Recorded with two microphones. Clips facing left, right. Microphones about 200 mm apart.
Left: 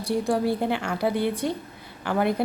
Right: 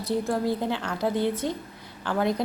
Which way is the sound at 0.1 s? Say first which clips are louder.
Left 1 dB; 20° right (ahead or behind).